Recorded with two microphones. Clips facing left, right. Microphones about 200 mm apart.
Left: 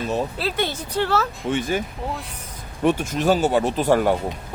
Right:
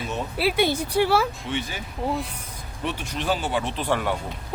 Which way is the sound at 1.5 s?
50° left (ahead or behind).